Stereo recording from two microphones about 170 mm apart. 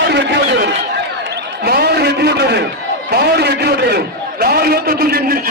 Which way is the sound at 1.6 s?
65° right (ahead or behind).